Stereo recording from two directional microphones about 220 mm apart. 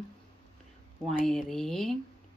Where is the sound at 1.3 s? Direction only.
Centre (ahead or behind).